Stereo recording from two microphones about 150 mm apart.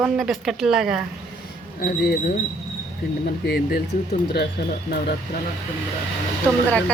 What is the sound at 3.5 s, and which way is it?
Speech, 90° left.